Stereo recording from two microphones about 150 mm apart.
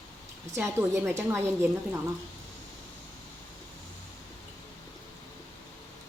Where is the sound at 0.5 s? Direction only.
15° right (ahead or behind).